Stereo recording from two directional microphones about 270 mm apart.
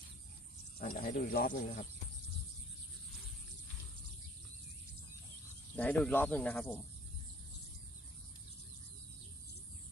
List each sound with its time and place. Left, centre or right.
0.8 s speech: left
5.7 s speech: centre